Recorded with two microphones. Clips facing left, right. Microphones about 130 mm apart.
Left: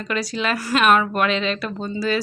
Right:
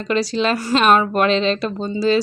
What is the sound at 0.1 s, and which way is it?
Speech, 30° right (ahead or behind).